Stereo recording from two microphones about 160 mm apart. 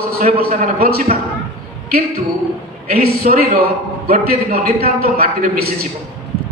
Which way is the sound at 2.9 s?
70° right (ahead or behind).